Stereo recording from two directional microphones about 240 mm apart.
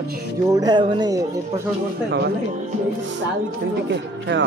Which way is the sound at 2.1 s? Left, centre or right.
Right.